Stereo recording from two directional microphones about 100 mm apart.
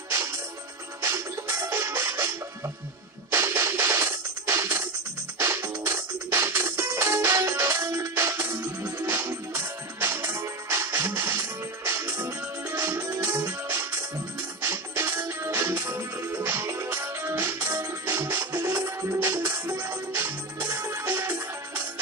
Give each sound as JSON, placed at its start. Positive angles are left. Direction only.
{"t": 0.1, "sound": "music", "side_deg": -30}